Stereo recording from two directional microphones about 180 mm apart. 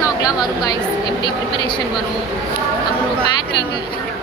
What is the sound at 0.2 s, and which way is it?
Speech, 20° left (ahead or behind).